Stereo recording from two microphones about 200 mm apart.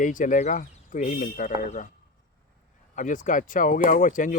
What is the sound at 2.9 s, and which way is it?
Speech, 40° left (ahead or behind).